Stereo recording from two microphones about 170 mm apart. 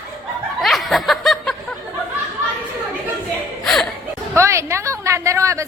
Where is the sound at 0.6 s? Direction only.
Centre (ahead or behind).